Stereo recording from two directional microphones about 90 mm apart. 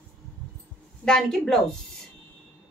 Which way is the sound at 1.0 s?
5° left (ahead or behind).